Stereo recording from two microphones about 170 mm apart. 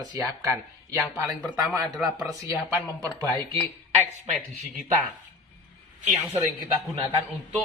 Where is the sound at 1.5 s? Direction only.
5° right (ahead or behind).